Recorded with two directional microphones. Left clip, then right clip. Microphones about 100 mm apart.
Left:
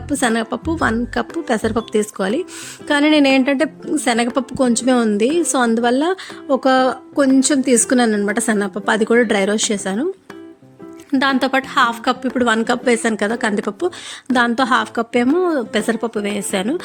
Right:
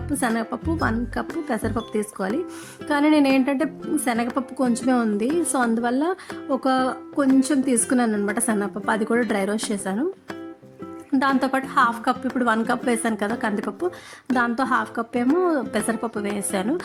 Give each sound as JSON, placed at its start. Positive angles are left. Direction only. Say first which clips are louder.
{"t": 0.2, "sound": "a woman's voice", "louder": "left 7 dB", "side_deg": 35}
{"t": 11.2, "sound": "a woman's voice", "louder": "left 5 dB", "side_deg": 20}
{"t": 15.4, "sound": "a woman's voice", "louder": "left 4 dB", "side_deg": 20}